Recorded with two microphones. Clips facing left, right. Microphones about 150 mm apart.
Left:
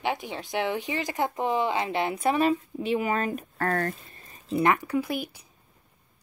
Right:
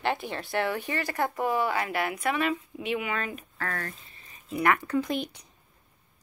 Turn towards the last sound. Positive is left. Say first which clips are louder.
# even
turn(degrees=5)  # may be behind; listen again after turning